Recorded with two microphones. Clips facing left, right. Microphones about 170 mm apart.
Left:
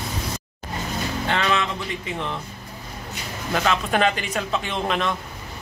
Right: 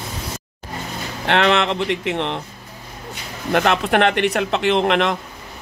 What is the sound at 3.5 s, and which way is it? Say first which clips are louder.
Speech: right 5 dB; 65° right (ahead or behind).